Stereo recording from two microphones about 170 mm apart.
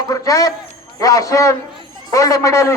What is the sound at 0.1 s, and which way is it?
A man's voice, 20° left (ahead or behind).